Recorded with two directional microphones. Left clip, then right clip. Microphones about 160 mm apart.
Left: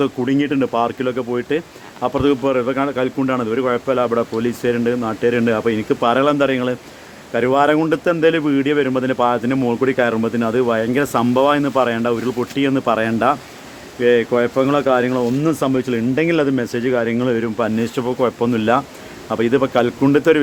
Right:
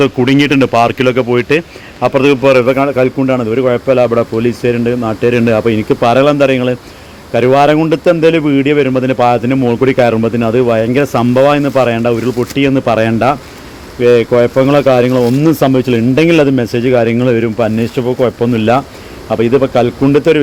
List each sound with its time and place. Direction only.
0.0 s a man's voice: 15° right (ahead or behind)
2.0 s a man's voice: centre (ahead or behind)